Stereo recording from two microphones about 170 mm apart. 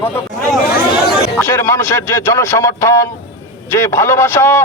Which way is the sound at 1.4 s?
15° left (ahead or behind).